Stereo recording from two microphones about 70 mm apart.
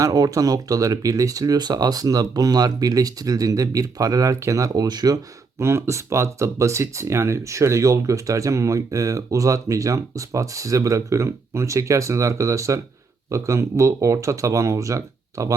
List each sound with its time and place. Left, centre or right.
0.0 s speech: right
5.5 s speech: right